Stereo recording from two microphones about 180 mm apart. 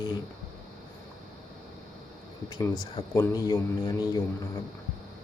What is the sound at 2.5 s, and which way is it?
Speech, 20° left (ahead or behind).